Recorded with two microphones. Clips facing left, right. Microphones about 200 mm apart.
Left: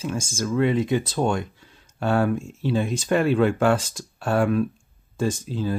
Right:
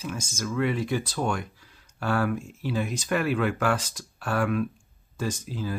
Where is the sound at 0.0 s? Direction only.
30° left (ahead or behind).